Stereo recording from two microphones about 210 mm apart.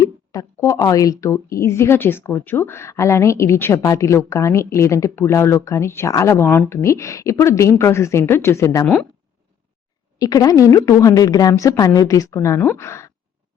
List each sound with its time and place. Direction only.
0.0 s a woman's voice: 15° left (ahead or behind)
10.2 s a woman's voice: 15° left (ahead or behind)